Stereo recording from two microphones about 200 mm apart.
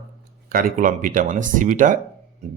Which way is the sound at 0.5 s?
45° right (ahead or behind).